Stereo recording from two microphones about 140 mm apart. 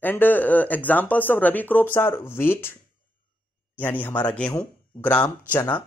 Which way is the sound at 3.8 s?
15° left (ahead or behind).